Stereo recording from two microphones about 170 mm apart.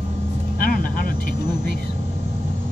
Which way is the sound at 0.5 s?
55° left (ahead or behind).